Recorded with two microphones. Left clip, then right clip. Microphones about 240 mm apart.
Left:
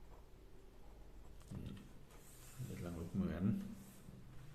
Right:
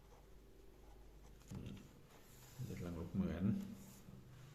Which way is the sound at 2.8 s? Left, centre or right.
Centre.